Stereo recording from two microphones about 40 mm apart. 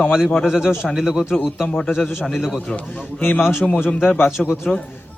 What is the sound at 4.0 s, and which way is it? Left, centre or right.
Speech, left.